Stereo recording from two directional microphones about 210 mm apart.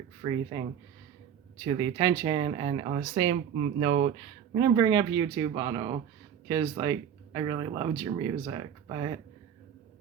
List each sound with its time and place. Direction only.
0.2 s speech: 20° right (ahead or behind)
1.6 s speech: 20° right (ahead or behind)